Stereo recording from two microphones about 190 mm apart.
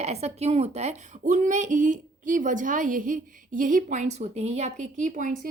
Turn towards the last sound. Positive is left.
turn(degrees=-45)  # may be behind; listen again after turning